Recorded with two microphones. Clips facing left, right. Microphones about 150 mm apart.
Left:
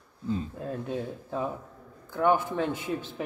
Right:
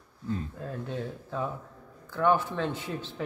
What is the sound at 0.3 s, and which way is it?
Speech, 15° left (ahead or behind).